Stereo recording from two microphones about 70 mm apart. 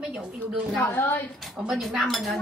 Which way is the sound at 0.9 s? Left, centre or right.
Left.